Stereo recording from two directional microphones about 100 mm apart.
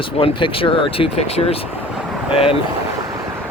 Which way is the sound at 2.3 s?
70° left (ahead or behind).